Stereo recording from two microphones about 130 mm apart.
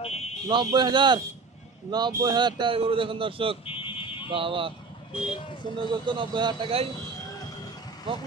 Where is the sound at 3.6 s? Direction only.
45° left (ahead or behind).